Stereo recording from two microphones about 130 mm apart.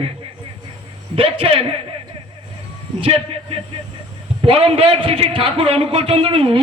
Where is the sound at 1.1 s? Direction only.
45° right (ahead or behind).